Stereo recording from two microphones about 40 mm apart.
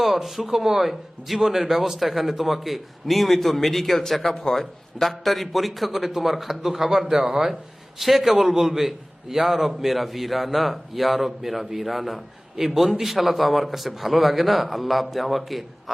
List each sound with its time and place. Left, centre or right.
0.0 s a man's voice: centre